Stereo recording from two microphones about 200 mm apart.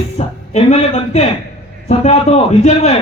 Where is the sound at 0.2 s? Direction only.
35° left (ahead or behind).